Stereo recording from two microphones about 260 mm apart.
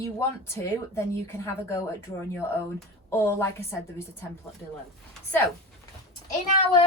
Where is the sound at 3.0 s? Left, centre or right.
Centre.